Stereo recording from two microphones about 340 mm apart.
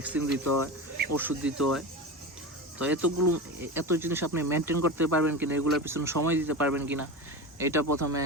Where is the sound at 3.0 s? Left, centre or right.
Right.